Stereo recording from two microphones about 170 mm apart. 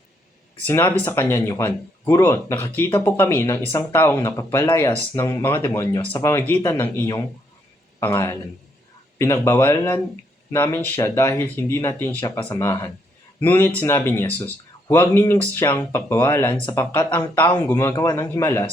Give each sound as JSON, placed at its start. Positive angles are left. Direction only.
{"t": 0.7, "sound": "speech", "side_deg": 10}